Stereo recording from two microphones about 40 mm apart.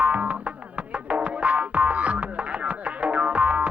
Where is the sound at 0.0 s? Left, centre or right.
Right.